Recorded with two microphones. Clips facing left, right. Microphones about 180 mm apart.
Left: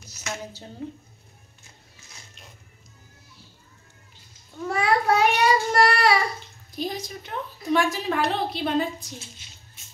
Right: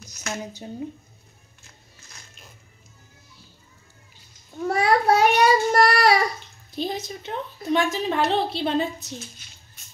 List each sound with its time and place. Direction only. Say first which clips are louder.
0.0 s a sound: right 3 dB; 5° left (ahead or behind)
4.6 s child singing: right 3 dB; 40° right (ahead or behind)
6.7 s a woman's voice: right 2 dB; 25° right (ahead or behind)